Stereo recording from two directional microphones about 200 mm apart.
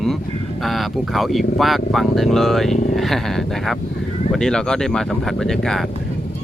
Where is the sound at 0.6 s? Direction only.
Centre (ahead or behind).